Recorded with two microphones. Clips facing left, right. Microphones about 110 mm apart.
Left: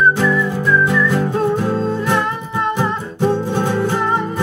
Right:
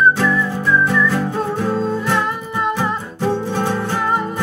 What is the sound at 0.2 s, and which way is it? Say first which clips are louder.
Whistling: left 1 dB; 15° left (ahead or behind).